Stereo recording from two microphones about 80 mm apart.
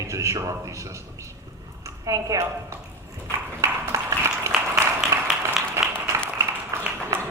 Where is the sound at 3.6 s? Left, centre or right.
Right.